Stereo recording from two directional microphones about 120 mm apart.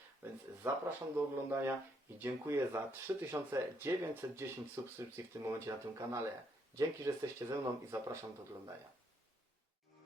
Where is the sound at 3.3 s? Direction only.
20° right (ahead or behind).